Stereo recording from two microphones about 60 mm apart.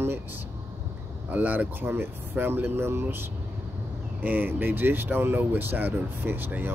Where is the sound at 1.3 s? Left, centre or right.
Right.